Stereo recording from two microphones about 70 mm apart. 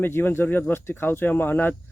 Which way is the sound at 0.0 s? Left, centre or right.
Left.